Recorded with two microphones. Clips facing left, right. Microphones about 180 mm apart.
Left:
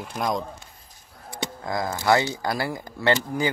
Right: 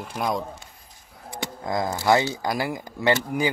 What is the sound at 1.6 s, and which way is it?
Speech, 20° right (ahead or behind).